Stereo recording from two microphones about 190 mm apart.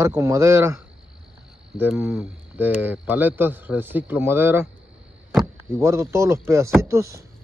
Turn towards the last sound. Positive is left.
turn(degrees=-15)  # may be behind; listen again after turning